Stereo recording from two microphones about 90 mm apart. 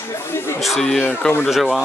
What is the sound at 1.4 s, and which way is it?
Speech, 5° right (ahead or behind).